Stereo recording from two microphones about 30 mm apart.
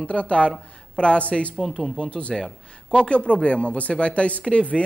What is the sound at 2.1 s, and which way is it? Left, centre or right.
Speech, left.